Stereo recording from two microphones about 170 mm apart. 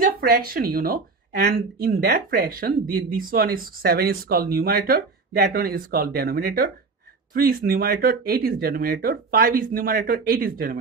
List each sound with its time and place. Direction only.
0.0 s speech: 60° right (ahead or behind)